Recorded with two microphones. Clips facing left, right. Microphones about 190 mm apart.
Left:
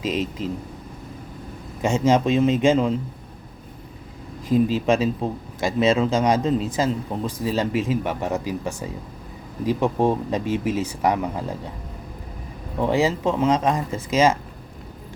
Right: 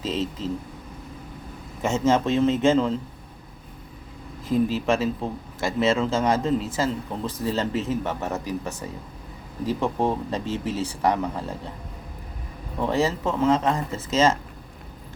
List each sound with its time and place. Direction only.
0.0 s speech: 15° left (ahead or behind)
1.8 s speech: 15° left (ahead or behind)
4.4 s speech: 15° left (ahead or behind)
12.8 s speech: 15° left (ahead or behind)